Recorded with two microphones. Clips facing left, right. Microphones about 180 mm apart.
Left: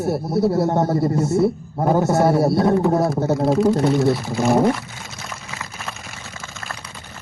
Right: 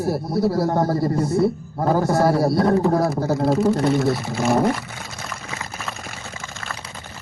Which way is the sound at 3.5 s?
5° right (ahead or behind).